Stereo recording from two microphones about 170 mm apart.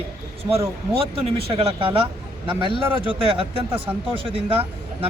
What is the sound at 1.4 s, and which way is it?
A man's voice, 35° right (ahead or behind).